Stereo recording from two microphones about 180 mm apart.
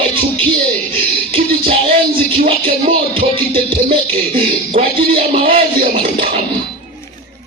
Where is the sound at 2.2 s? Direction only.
35° right (ahead or behind).